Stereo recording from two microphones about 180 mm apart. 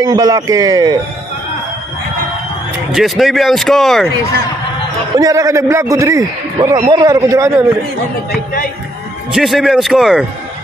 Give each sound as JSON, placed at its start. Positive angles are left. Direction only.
{"t": 0.0, "sound": "speech", "side_deg": -20}
{"t": 2.9, "sound": "speech", "side_deg": 0}
{"t": 5.1, "sound": "a man's voice", "side_deg": -20}
{"t": 9.3, "sound": "speech", "side_deg": 0}